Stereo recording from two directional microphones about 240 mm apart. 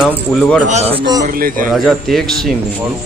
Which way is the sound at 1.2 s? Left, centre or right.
Right.